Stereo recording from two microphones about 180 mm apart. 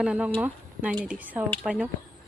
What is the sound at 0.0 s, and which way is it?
Speech, 5° right (ahead or behind).